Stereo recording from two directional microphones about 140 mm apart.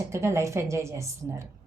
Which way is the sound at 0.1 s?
20° right (ahead or behind).